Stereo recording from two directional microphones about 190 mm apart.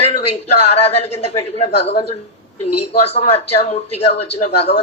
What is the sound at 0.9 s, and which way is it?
A man's voice, 35° left (ahead or behind).